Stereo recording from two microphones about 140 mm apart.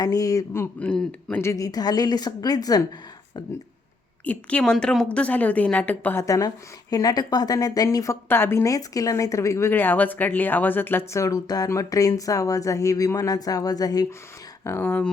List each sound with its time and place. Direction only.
0.0 s a woman's voice: 25° left (ahead or behind)
4.3 s a woman's voice: 10° left (ahead or behind)